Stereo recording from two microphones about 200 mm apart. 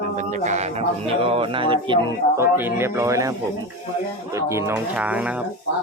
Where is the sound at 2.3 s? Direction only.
10° right (ahead or behind).